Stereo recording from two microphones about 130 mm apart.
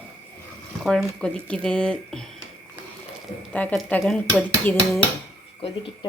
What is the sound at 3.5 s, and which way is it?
Speech, 10° left (ahead or behind).